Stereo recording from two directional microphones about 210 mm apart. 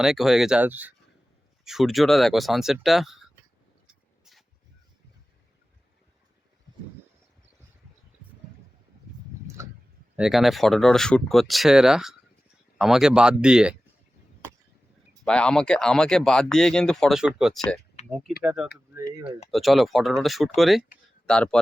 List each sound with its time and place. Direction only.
0.0 s speech: centre (ahead or behind)
10.2 s speech: centre (ahead or behind)
15.2 s speech: 5° left (ahead or behind)
18.0 s a sound: 30° left (ahead or behind)
18.4 s speech: 5° right (ahead or behind)